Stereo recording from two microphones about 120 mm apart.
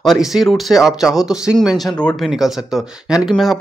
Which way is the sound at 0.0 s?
Centre (ahead or behind).